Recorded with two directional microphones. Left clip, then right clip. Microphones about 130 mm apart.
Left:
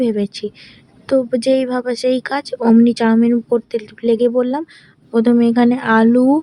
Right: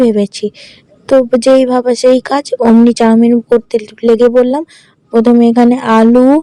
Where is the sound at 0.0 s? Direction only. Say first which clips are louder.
Right 8 dB; 30° right (ahead or behind).